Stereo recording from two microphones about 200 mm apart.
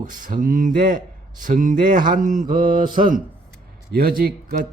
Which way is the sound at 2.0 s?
40° right (ahead or behind).